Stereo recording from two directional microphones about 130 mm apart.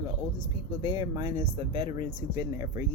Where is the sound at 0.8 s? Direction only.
35° right (ahead or behind).